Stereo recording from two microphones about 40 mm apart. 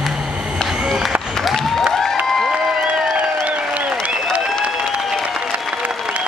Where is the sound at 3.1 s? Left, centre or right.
Right.